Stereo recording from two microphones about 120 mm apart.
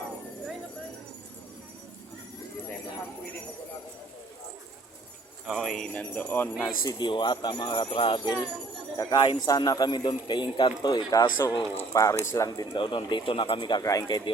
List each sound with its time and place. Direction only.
5.5 s speech: centre (ahead or behind)
6.8 s speech: 35° left (ahead or behind)
12.5 s speech: 40° left (ahead or behind)